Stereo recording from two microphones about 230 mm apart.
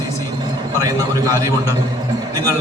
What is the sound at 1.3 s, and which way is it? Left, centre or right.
Speech, centre.